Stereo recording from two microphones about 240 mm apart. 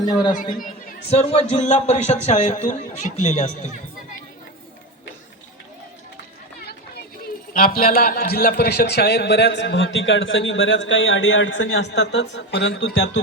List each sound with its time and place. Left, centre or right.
0.0 s speech: centre
0.5 s speech: left
7.5 s a man's voice: left